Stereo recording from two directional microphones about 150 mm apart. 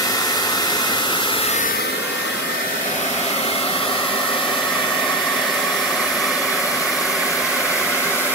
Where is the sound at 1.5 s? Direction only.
60° left (ahead or behind).